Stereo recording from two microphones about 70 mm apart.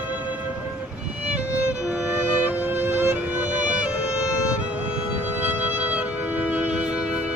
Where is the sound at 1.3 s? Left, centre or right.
Centre.